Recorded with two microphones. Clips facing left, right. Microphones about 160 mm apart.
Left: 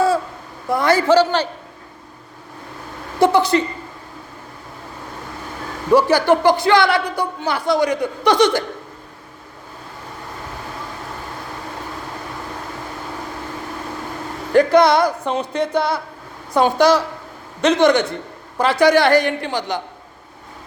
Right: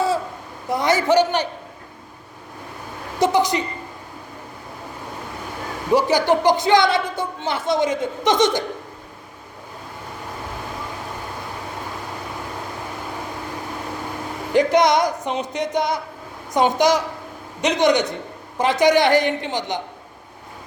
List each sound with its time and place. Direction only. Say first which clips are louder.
0.7 s speech: left 3 dB; 20° right (ahead or behind)
3.3 s speech: left 3 dB; 15° right (ahead or behind)
5.9 s a woman's voice: left 3 dB; 15° right (ahead or behind)
14.5 s a woman's voice: left 3 dB; 15° right (ahead or behind)